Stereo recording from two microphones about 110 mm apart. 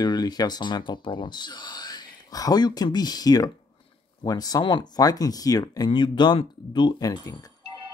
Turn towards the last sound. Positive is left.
turn(degrees=35)  # may be behind; listen again after turning